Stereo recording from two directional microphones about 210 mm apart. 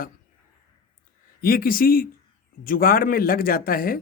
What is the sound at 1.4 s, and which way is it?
Speech, 45° left (ahead or behind).